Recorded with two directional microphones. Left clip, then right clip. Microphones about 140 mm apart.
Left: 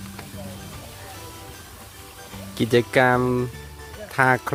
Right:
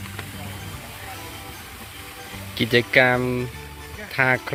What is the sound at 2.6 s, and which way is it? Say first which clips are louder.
Speech: right 1 dB; 35° left (ahead or behind).